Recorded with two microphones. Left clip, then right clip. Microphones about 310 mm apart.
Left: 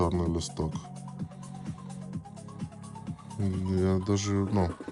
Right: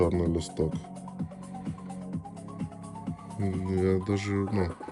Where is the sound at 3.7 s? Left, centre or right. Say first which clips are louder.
Right 1 dB; centre.